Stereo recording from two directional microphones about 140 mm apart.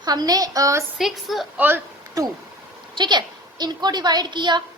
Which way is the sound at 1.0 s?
Centre (ahead or behind).